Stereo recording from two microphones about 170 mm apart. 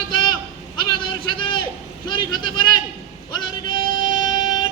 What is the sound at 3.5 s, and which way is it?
Female singing, 30° left (ahead or behind).